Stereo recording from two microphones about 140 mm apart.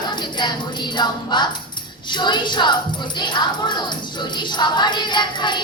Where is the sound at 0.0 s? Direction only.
30° left (ahead or behind).